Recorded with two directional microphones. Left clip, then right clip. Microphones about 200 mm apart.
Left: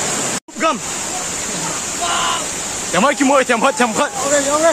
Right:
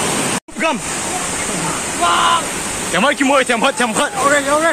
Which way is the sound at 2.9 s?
15° left (ahead or behind).